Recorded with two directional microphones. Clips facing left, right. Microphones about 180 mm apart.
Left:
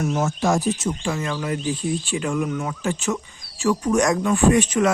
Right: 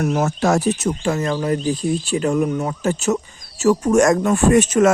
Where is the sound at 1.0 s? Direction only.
40° right (ahead or behind).